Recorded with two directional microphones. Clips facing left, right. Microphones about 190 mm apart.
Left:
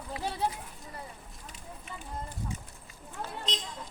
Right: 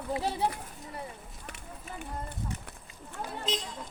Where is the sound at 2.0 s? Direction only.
65° right (ahead or behind).